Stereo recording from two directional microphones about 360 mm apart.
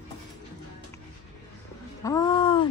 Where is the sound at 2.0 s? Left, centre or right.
Centre.